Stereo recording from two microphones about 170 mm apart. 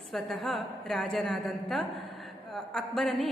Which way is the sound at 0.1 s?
Centre (ahead or behind).